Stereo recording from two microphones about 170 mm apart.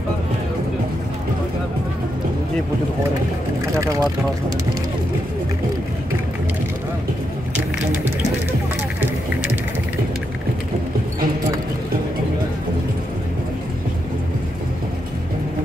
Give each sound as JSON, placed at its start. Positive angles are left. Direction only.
{"t": 3.8, "sound": "speech", "side_deg": -20}